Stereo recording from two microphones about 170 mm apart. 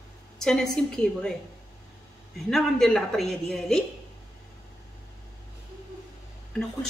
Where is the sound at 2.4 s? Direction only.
Centre (ahead or behind).